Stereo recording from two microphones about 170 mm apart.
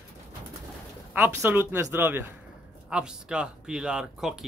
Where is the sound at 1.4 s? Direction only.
15° right (ahead or behind).